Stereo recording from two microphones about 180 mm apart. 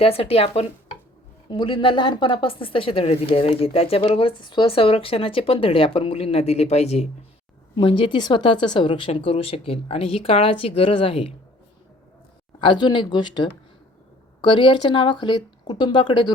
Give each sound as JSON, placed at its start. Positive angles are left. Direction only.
{"t": 0.0, "sound": "a woman's voice", "side_deg": 30}
{"t": 12.5, "sound": "speech", "side_deg": 25}